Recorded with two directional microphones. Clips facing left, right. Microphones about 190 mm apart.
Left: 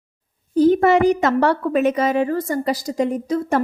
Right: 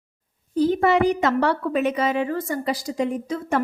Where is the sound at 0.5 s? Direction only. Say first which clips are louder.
Left 5 dB; 45° left (ahead or behind).